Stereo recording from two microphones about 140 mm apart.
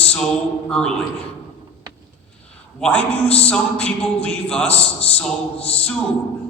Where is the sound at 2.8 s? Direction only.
10° left (ahead or behind).